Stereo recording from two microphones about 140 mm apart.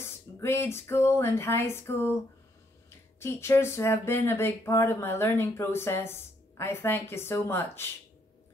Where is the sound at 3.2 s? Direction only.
20° left (ahead or behind).